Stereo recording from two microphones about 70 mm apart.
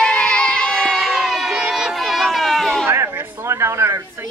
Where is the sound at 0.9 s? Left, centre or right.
Centre.